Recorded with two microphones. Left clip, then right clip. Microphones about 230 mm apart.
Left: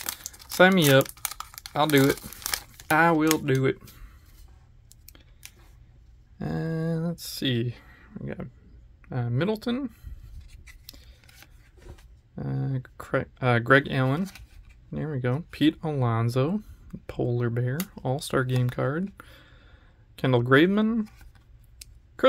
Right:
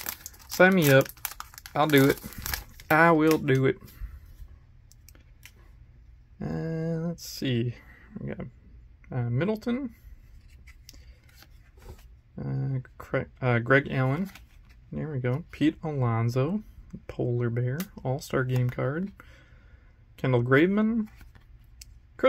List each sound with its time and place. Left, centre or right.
0.0 s crumpling: centre
6.3 s a sound: centre
9.0 s speech: centre
12.4 s speech: centre
19.1 s a sound: centre
20.2 s speech: centre